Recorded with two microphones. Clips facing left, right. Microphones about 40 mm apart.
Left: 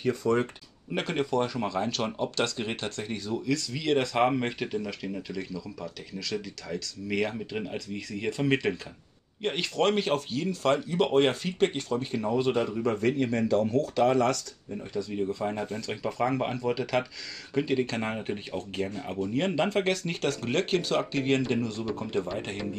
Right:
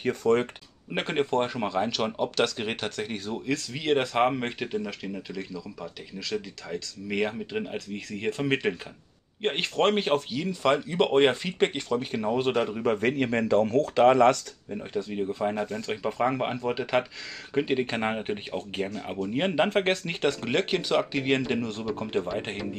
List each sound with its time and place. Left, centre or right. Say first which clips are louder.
0.0 s speech: right 2 dB; right
0.9 s speech: right 2 dB; right
4.3 s speech: even; centre
5.8 s speech: even; centre
7.7 s speech: right 1 dB; right
14.7 s speech: right 2 dB; right
22.0 s speech: right 2 dB; right